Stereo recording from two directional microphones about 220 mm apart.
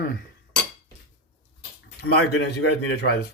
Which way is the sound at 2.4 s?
50° left (ahead or behind).